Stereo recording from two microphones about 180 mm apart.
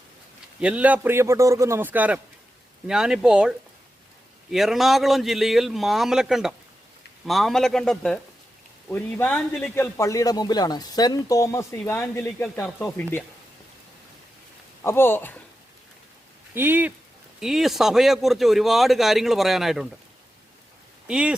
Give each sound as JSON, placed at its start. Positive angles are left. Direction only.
{"t": 0.6, "sound": "a man's voice", "side_deg": -5}
{"t": 4.5, "sound": "a man's voice", "side_deg": 0}
{"t": 14.8, "sound": "a man's voice", "side_deg": 15}
{"t": 16.6, "sound": "a man's voice", "side_deg": -10}
{"t": 21.1, "sound": "a man's voice", "side_deg": -5}